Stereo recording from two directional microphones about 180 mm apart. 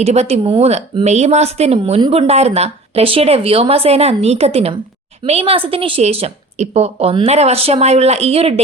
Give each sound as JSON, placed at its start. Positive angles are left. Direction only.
{"t": 0.0, "sound": "a woman's voice", "side_deg": -35}